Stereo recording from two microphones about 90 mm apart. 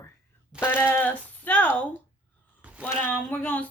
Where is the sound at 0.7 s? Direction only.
20° left (ahead or behind).